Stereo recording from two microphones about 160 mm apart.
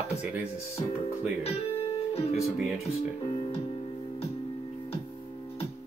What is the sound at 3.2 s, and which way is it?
Music, 35° left (ahead or behind).